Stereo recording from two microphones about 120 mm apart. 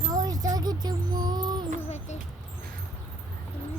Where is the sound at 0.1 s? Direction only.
30° right (ahead or behind).